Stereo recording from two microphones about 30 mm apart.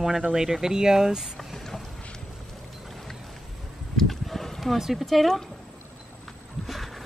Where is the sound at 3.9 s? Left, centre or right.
Centre.